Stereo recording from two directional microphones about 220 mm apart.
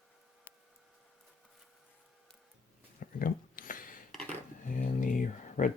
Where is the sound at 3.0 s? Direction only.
40° left (ahead or behind).